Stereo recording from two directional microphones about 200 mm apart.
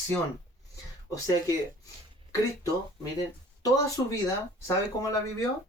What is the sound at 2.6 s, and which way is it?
Speech, 15° left (ahead or behind).